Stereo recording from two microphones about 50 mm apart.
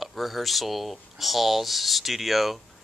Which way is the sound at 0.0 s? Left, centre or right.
Centre.